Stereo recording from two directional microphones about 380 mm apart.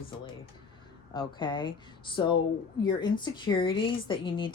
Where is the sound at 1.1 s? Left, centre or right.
Centre.